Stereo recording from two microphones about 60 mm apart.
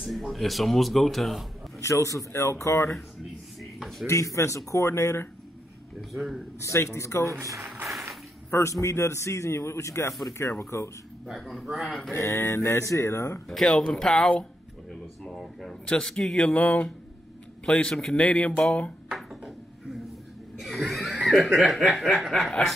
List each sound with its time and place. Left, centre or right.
0.0 s a man's voice: centre
1.8 s a man's voice: left
4.1 s a man's voice: left
5.9 s a man's voice: centre
6.6 s a man's voice: left
8.5 s a man's voice: left
11.3 s a man's voice: centre
12.1 s speech: left
13.5 s a man's voice: centre
16.5 s speech: left
17.6 s speech: centre
19.0 s a sound: centre
20.6 s laughter: centre
21.4 s a man's voice: centre